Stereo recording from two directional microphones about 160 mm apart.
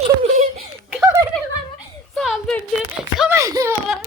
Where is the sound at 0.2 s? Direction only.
45° right (ahead or behind).